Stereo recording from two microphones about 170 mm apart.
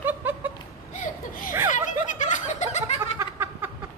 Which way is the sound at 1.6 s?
50° left (ahead or behind).